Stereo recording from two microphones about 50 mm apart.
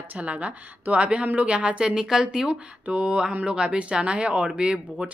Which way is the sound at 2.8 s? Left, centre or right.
Right.